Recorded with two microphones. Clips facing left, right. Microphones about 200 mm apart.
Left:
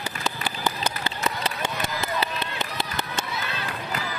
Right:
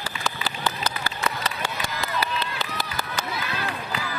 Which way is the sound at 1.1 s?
20° left (ahead or behind).